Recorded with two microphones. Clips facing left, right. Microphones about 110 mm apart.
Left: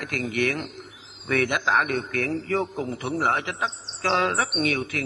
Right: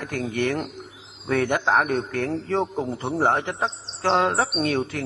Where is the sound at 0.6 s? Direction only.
Centre (ahead or behind).